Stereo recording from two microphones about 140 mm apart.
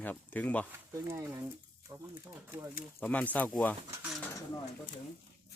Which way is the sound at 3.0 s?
10° left (ahead or behind).